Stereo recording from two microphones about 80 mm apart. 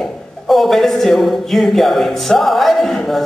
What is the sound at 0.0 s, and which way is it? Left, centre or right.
A man's voice, centre.